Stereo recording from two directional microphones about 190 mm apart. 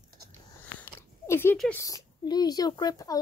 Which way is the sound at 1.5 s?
5° left (ahead or behind).